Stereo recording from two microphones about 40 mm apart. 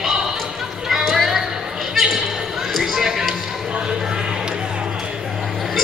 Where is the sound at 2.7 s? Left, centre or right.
Centre.